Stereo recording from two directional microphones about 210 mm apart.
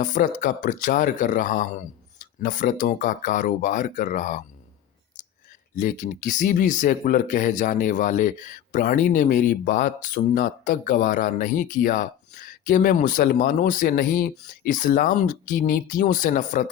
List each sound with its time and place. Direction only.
0.0 s speech: 40° left (ahead or behind)
5.7 s speech: 35° left (ahead or behind)